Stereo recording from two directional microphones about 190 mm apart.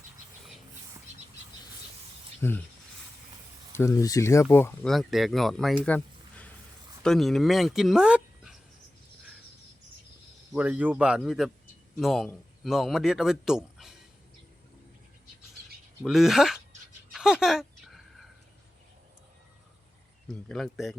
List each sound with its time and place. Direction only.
2.4 s speech: 10° left (ahead or behind)
3.8 s speech: 15° left (ahead or behind)
4.9 s speech: centre (ahead or behind)
10.5 s speech: 5° right (ahead or behind)
16.0 s speech: centre (ahead or behind)
17.1 s a sound: 5° right (ahead or behind)
20.2 s speech: centre (ahead or behind)